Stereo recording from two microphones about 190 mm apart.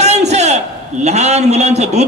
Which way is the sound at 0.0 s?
35° right (ahead or behind).